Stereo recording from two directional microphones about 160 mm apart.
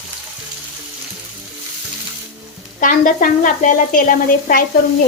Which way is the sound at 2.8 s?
55° left (ahead or behind).